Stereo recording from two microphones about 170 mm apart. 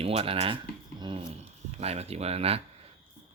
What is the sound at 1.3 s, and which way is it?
Speech, 40° right (ahead or behind).